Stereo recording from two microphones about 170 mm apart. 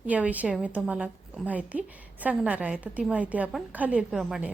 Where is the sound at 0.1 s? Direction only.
10° right (ahead or behind).